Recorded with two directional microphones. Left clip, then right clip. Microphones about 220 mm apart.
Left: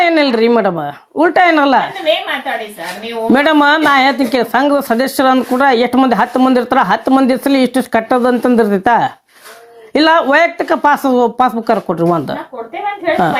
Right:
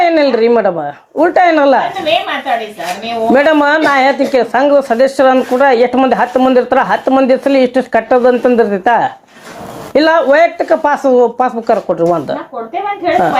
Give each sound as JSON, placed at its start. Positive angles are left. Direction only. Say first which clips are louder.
{"t": 0.0, "sound": "speech", "louder": "right 2 dB", "side_deg": 50}
{"t": 3.3, "sound": "speech", "louder": "right 1 dB", "side_deg": 50}